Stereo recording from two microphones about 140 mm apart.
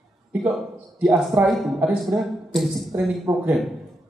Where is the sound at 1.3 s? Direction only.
15° right (ahead or behind).